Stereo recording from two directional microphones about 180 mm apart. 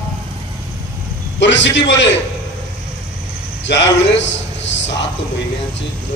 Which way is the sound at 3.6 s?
85° left.